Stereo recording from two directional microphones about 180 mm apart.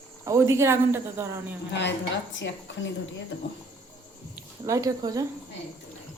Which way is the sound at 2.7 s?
90° left.